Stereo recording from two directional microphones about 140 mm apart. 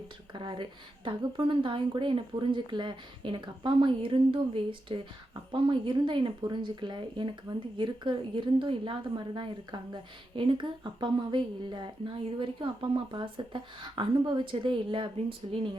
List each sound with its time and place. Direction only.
0.3 s a woman's voice: 35° right (ahead or behind)